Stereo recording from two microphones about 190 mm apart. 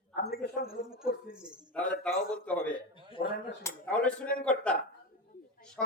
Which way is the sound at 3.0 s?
25° left (ahead or behind).